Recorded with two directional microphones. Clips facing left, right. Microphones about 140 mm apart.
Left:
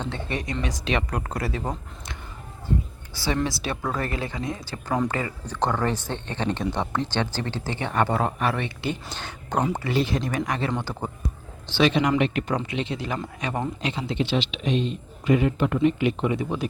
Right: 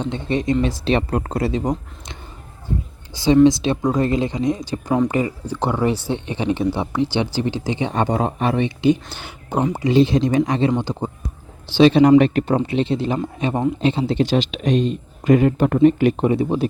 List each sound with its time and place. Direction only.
0.0 s speech: 20° right (ahead or behind)
3.4 s speech: 20° right (ahead or behind)
9.0 s speech: 10° right (ahead or behind)
9.7 s speech: 20° right (ahead or behind)
11.8 s a man's voice: 35° right (ahead or behind)